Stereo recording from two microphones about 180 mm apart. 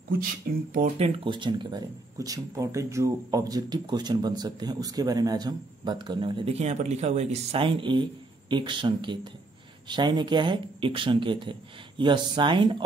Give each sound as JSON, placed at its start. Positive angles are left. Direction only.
{"t": 0.9, "sound": "speech", "side_deg": -30}